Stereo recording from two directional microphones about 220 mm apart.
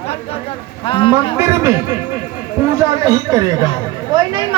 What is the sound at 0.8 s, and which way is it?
Speech, 25° left (ahead or behind).